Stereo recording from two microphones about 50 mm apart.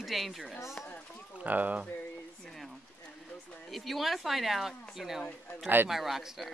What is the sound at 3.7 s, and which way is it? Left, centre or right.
Speech, centre.